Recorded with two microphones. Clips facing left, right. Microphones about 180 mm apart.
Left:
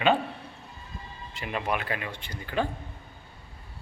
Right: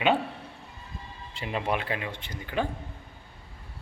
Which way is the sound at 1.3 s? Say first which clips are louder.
Right 1 dB; 25° right (ahead or behind).